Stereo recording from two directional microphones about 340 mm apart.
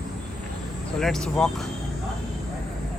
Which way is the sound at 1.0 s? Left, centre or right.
Centre.